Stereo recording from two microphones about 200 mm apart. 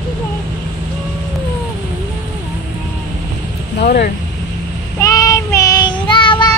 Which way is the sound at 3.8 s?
50° left (ahead or behind).